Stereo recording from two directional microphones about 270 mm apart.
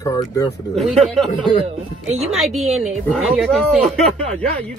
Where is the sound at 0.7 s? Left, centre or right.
Centre.